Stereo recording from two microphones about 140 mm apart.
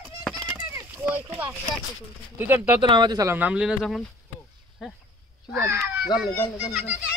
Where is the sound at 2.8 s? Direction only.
35° right (ahead or behind).